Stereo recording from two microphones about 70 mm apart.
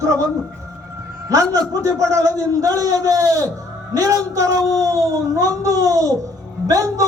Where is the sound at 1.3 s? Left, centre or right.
Right.